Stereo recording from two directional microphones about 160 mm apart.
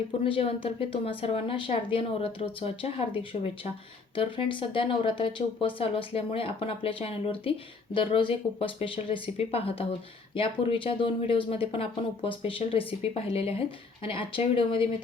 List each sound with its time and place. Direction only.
0.3 s speech: 35° left (ahead or behind)
4.1 s speech: 35° left (ahead or behind)